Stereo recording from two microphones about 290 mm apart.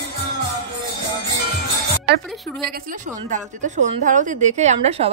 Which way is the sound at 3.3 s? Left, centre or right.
Right.